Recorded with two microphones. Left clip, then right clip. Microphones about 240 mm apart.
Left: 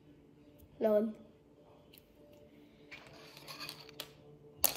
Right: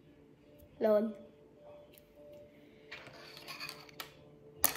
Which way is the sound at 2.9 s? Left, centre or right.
Centre.